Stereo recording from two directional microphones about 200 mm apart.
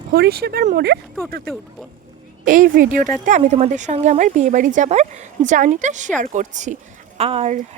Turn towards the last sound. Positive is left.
turn(degrees=-35)  # may be behind; listen again after turning